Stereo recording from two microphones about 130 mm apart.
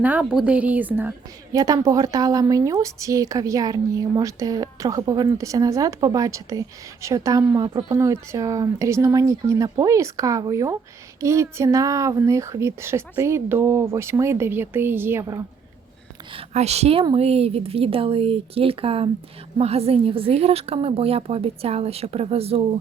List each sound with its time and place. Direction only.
0.0 s a woman's voice: 10° right (ahead or behind)
1.5 s a woman's voice: 30° right (ahead or behind)
7.9 s a woman's voice: 20° right (ahead or behind)
16.3 s a woman's voice: 55° right (ahead or behind)